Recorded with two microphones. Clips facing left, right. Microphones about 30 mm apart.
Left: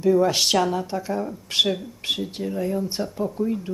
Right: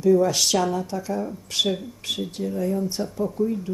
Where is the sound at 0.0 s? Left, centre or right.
Left.